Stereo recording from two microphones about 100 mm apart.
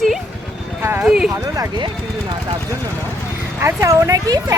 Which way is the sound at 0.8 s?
25° right (ahead or behind).